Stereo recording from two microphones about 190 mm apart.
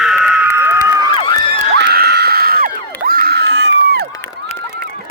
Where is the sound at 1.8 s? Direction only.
60° right (ahead or behind).